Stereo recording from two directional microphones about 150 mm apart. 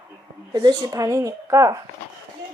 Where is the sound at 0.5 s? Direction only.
25° right (ahead or behind).